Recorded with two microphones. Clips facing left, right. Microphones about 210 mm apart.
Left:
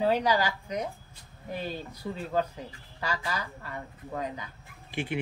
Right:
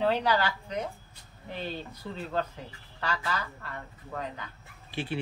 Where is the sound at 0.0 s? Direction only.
10° left (ahead or behind).